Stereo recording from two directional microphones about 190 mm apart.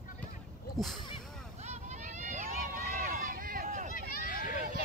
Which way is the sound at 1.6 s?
35° right (ahead or behind).